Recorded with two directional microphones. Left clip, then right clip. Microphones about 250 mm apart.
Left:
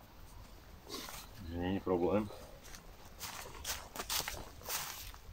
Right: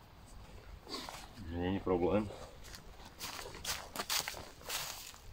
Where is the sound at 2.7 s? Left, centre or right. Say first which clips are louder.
Right 2 dB; right.